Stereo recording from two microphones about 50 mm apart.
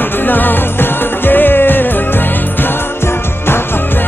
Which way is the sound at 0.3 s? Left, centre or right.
Left.